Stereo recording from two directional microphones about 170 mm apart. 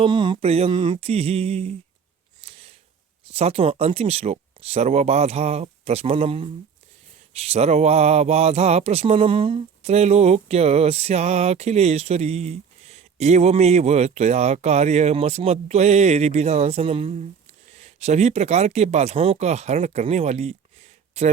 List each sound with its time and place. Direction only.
0.0 s speech: 25° right (ahead or behind)
2.4 s a sound: 35° right (ahead or behind)
3.3 s speech: 35° right (ahead or behind)